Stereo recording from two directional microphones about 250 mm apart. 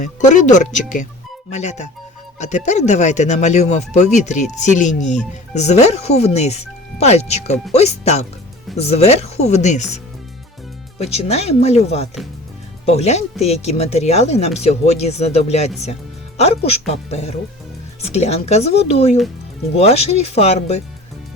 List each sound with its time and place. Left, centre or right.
0.0 s speech: left
11.0 s speech: left